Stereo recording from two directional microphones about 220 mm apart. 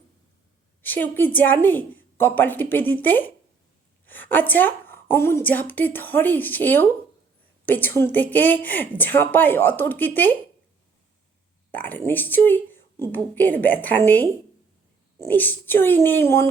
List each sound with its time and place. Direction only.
0.8 s a woman's voice: 10° left (ahead or behind)
11.7 s a woman's voice: 10° left (ahead or behind)